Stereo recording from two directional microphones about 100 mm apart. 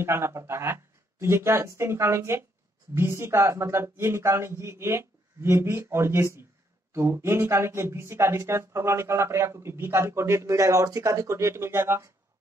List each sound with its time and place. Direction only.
0.0 s speech: 25° right (ahead or behind)